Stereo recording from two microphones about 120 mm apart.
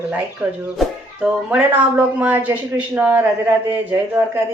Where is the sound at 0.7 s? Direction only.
5° right (ahead or behind).